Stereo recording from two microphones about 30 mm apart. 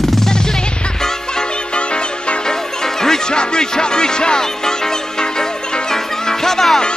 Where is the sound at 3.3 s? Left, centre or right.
Left.